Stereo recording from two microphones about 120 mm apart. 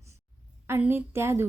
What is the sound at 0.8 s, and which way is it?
Speech, 20° right (ahead or behind).